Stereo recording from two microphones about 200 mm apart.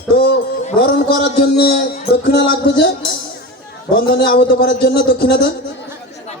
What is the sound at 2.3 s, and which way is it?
Speech, 60° left (ahead or behind).